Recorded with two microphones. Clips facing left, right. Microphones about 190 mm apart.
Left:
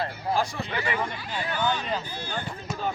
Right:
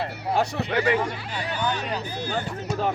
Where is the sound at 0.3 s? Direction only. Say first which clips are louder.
Right 7 dB; 70° right (ahead or behind).